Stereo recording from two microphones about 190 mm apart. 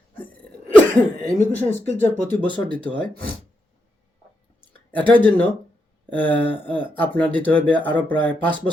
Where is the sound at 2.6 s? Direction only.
25° right (ahead or behind).